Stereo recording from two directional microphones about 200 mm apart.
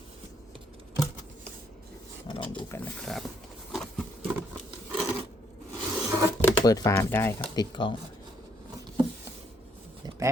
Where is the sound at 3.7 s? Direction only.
Centre (ahead or behind).